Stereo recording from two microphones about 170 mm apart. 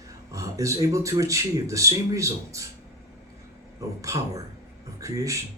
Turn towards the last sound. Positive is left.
turn(degrees=-20)  # may be behind; listen again after turning